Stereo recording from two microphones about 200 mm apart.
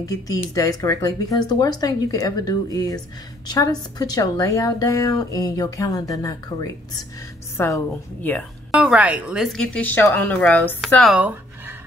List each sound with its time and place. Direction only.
0.0 s a woman's voice: 15° left (ahead or behind)
8.7 s a woman's voice: 5° right (ahead or behind)